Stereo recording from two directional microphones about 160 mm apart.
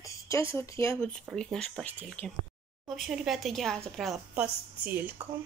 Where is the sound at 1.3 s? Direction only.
5° left (ahead or behind).